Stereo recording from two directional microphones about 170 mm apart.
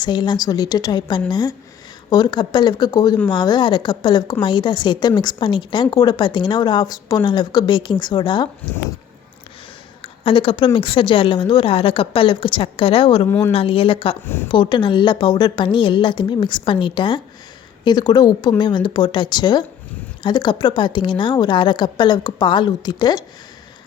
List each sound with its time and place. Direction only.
0.0 s a woman's voice: 25° left (ahead or behind)
10.0 s a sound: 30° left (ahead or behind)
10.8 s a woman's voice: 30° left (ahead or behind)
13.2 s speech: 15° left (ahead or behind)
13.5 s a woman's voice: 35° left (ahead or behind)